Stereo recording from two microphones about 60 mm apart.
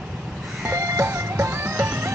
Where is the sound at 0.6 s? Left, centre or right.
Right.